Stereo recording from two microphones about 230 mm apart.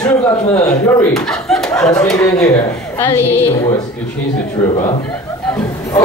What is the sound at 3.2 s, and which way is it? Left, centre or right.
Speech, left.